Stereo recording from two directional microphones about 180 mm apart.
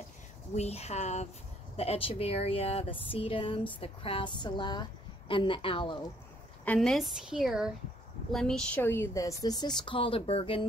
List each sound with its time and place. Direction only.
0.6 s speech: 35° left (ahead or behind)
6.6 s a woman's voice: 5° left (ahead or behind); by 10.7 s 30° left (ahead or behind)